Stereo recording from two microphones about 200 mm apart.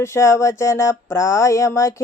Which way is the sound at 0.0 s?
15° left (ahead or behind).